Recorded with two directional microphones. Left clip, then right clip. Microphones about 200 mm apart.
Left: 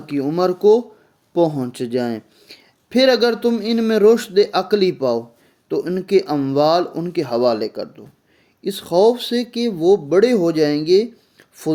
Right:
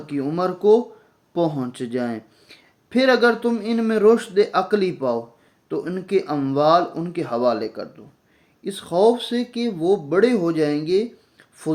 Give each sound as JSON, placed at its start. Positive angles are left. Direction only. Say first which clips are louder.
{"t": 0.0, "sound": "speech", "louder": "left 4 dB", "side_deg": 45}